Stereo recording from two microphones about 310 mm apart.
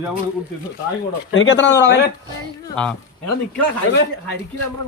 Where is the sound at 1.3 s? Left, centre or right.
Left.